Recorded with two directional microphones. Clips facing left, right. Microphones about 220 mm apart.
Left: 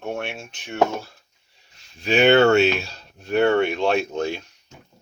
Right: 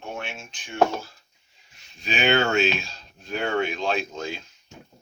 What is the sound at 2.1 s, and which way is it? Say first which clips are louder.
Speech: left 8 dB; 65° left (ahead or behind).